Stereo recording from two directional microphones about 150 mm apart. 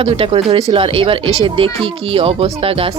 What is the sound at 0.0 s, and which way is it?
Speech, 40° right (ahead or behind).